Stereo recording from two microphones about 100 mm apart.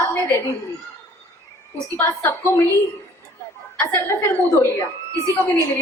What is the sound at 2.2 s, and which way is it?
Speech, 30° left (ahead or behind).